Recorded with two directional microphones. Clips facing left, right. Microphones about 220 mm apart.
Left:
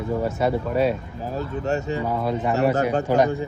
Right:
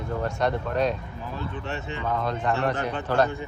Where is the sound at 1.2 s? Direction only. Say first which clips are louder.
Left 8 dB; 40° left (ahead or behind).